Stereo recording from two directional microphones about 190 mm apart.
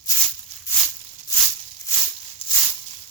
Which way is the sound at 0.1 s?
15° left (ahead or behind).